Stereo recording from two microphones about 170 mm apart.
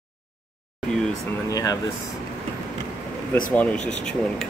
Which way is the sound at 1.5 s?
20° left (ahead or behind).